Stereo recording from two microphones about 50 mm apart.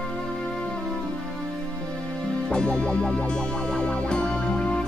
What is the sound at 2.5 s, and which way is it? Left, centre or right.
Music, centre.